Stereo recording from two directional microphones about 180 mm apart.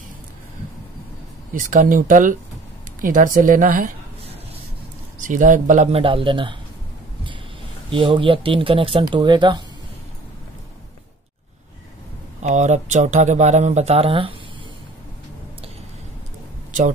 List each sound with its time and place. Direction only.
1.5 s a woman's voice: 45° right (ahead or behind)
5.2 s speech: 45° right (ahead or behind); by 6.5 s 30° right (ahead or behind)
7.9 s speech: 30° right (ahead or behind)
12.4 s speech: 40° right (ahead or behind)